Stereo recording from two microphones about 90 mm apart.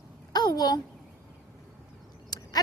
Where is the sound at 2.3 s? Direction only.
45° left (ahead or behind).